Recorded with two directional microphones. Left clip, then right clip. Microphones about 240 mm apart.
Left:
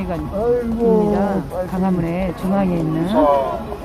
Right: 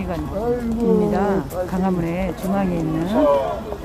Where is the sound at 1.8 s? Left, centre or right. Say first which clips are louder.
Left 1 dB; centre.